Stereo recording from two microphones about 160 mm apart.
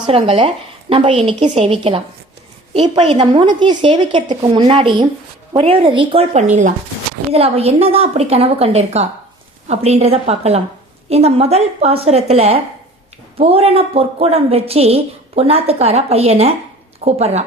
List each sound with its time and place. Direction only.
0.1 s a woman's voice: 35° right (ahead or behind)
6.3 s speech: 50° right (ahead or behind)
7.3 s a woman's voice: 40° right (ahead or behind)